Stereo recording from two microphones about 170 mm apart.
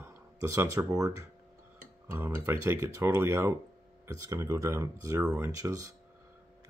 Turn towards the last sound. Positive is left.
turn(degrees=-20)  # may be behind; listen again after turning